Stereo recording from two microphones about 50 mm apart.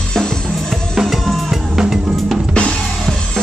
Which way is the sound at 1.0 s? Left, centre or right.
Centre.